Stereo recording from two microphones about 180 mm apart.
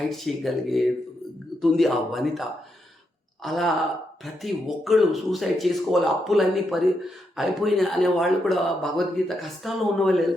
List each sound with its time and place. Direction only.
0.1 s speech: centre (ahead or behind)